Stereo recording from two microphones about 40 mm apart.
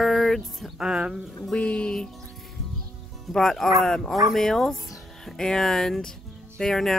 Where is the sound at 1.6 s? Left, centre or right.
Left.